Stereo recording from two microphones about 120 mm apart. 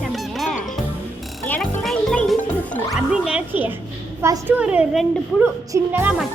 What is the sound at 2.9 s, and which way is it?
A woman's voice, 5° right (ahead or behind).